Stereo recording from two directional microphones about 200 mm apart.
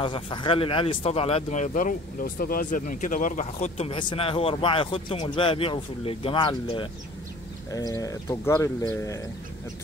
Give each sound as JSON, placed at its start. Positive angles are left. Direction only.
{"t": 0.0, "sound": "speech", "side_deg": 25}